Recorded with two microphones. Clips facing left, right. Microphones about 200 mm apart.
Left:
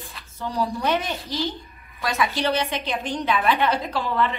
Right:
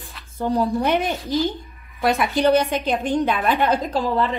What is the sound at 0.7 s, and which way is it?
A woman's voice, 55° right (ahead or behind).